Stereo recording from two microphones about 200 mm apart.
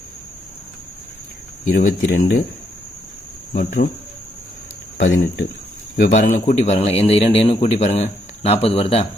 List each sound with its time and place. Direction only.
1.7 s speech: 45° left (ahead or behind)
3.5 s speech: 45° left (ahead or behind)
4.9 s a man's voice: 50° left (ahead or behind); by 9.0 s 30° left (ahead or behind)